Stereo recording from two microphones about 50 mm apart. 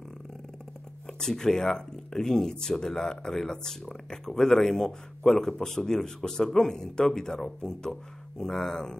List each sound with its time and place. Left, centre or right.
1.0 s speech: centre